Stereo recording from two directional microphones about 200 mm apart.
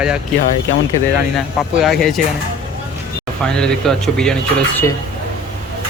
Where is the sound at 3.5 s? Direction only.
5° left (ahead or behind).